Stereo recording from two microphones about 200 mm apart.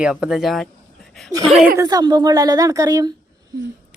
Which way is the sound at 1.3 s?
25° right (ahead or behind).